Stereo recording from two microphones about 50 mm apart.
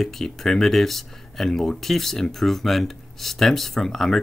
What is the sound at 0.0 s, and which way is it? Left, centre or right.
Speech, centre.